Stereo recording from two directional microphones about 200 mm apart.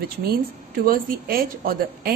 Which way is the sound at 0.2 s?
50° right (ahead or behind).